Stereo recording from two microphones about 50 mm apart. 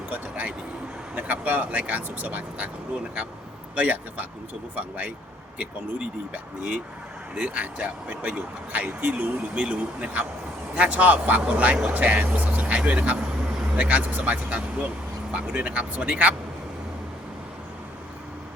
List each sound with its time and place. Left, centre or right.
0.1 s speech: right
3.8 s speech: right